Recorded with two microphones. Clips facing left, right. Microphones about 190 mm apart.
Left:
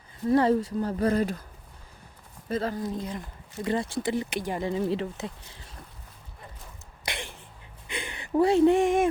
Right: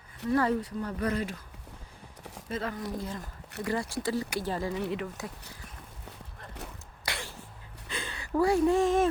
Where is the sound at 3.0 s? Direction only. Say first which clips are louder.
Left 2 dB; 20° left (ahead or behind).